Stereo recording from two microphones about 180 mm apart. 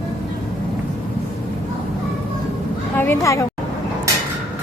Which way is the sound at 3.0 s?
15° left (ahead or behind).